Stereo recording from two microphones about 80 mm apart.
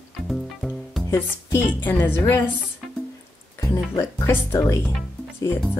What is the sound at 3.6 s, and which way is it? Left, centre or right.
Speech, left.